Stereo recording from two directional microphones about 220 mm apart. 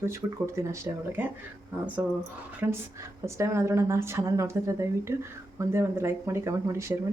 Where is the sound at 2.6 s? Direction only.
10° right (ahead or behind).